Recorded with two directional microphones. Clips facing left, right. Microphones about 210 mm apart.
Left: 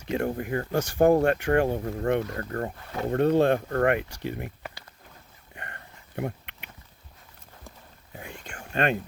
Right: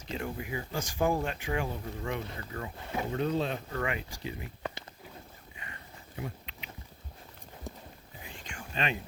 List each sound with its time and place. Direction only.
0.3 s speech: 55° left (ahead or behind)
5.5 s a sound: 60° left (ahead or behind)
8.2 s whispering: 60° left (ahead or behind)